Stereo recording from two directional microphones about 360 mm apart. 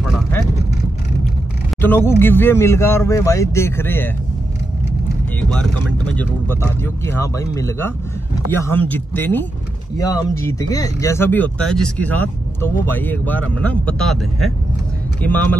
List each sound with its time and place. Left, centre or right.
1.8 s speech: centre
5.4 s vehicle: centre
6.1 s speech: centre